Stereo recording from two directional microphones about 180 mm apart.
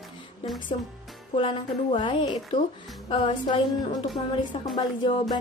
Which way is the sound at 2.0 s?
25° left (ahead or behind).